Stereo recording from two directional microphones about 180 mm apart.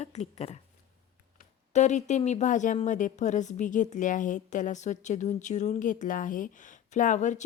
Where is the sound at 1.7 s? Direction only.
40° left (ahead or behind).